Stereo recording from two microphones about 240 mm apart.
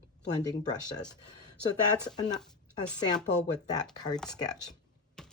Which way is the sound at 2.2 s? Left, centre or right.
Centre.